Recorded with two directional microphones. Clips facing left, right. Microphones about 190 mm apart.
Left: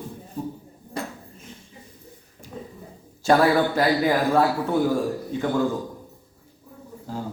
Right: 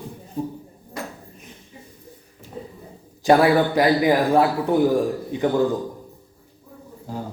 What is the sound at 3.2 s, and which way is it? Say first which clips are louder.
A man's voice: right 3 dB; 15° right (ahead or behind).